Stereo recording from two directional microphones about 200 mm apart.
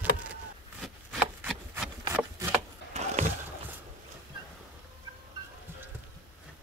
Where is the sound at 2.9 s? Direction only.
35° right (ahead or behind).